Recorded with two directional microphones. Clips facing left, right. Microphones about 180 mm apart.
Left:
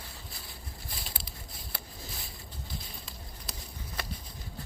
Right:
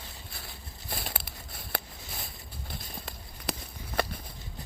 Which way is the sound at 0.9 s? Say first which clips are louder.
Right 9 dB; 60° right (ahead or behind).